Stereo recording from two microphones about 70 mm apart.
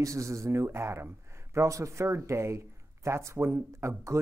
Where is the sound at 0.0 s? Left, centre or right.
Right.